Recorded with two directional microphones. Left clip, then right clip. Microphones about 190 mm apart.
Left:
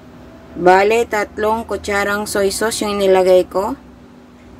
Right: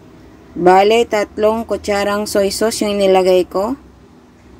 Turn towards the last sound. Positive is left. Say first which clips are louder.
# left 1 dB
turn(degrees=-20)  # may be behind; listen again after turning